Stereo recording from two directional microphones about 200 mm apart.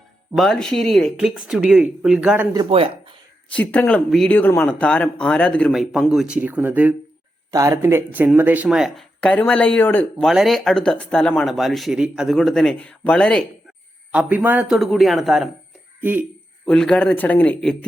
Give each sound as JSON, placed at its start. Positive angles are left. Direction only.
{"t": 0.3, "sound": "speech", "side_deg": 0}
{"t": 2.6, "sound": "speech", "side_deg": -30}
{"t": 3.5, "sound": "speech", "side_deg": 5}
{"t": 14.1, "sound": "speech", "side_deg": -5}
{"t": 16.6, "sound": "speech", "side_deg": 5}